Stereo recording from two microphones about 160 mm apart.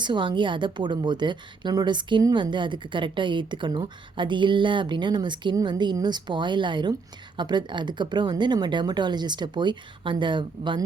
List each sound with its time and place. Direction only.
0.0 s a woman's voice: 30° right (ahead or behind)